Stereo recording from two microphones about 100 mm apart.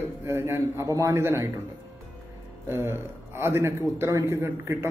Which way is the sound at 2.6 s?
25° right (ahead or behind).